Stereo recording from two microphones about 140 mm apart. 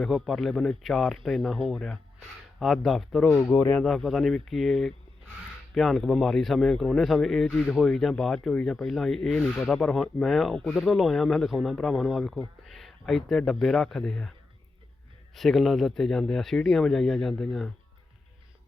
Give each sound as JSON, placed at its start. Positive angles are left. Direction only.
{"t": 0.0, "sound": "speech", "side_deg": 0}
{"t": 3.2, "sound": "speech", "side_deg": 15}
{"t": 15.4, "sound": "speech", "side_deg": 0}